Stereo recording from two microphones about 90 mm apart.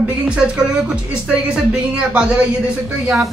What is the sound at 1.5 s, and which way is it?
Speech, 10° right (ahead or behind).